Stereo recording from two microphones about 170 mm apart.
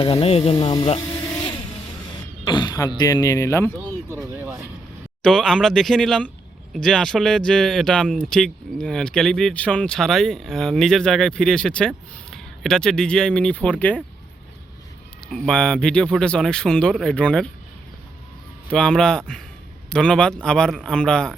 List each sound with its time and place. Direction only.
0.0 s speech: 35° left (ahead or behind)
1.1 s vehicle: 15° left (ahead or behind)
2.4 s speech: 25° left (ahead or behind)
3.8 s speech: 15° right (ahead or behind)
5.2 s speech: 5° left (ahead or behind)
15.3 s speech: centre (ahead or behind)
18.7 s speech: 5° left (ahead or behind)